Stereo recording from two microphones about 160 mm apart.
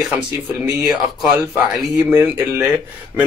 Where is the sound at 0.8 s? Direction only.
5° right (ahead or behind).